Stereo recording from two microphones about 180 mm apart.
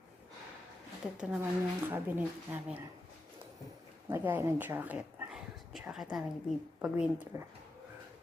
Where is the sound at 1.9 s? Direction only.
10° right (ahead or behind).